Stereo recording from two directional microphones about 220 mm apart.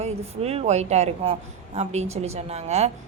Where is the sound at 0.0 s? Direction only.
30° right (ahead or behind).